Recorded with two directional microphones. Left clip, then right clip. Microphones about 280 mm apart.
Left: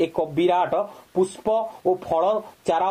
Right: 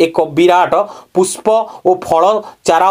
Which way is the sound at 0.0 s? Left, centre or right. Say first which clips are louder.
Right 11 dB; right.